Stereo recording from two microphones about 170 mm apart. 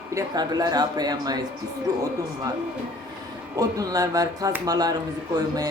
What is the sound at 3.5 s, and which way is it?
Speech, 20° right (ahead or behind).